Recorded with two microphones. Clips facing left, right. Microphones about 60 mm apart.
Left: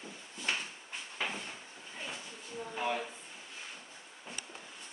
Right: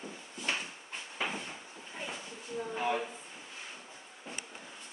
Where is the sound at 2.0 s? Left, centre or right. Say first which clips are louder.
Right 2 dB; centre.